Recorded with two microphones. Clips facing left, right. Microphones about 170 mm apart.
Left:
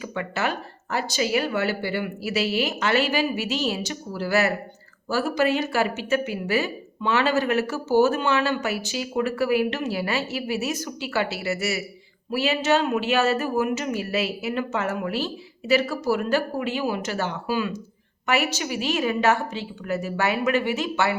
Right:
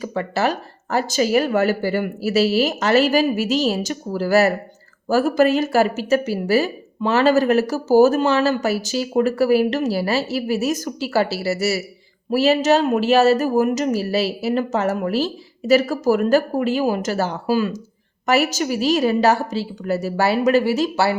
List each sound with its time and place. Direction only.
0.0 s a woman's voice: 35° right (ahead or behind)